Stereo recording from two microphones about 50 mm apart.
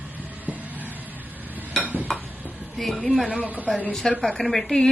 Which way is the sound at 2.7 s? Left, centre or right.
Centre.